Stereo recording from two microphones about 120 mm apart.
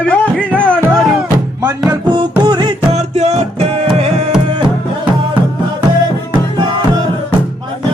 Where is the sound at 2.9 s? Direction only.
70° right (ahead or behind).